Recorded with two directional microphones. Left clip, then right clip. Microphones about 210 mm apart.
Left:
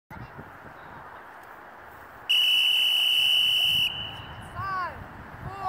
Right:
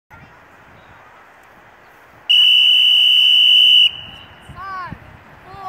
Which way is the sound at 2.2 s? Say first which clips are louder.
Right 11 dB; 15° left (ahead or behind).